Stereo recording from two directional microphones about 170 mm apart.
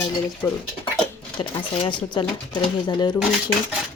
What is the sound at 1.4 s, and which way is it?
Speech, 30° left (ahead or behind).